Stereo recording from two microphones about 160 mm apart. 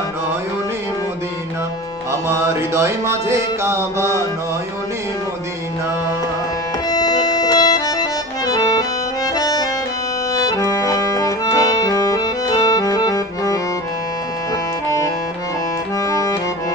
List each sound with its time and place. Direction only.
2.2 s music: 15° right (ahead or behind)
6.9 s accordion: 25° left (ahead or behind)
16.1 s music: 20° left (ahead or behind)